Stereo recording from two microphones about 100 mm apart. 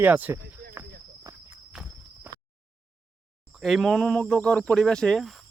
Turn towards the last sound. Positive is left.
turn(degrees=0)  # may be behind; listen again after turning